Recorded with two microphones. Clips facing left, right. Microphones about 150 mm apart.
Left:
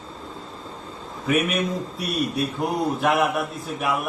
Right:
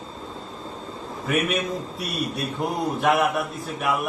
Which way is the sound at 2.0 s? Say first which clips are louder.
Left 3 dB; centre (ahead or behind).